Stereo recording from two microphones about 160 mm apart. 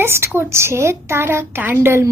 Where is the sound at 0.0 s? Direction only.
15° right (ahead or behind).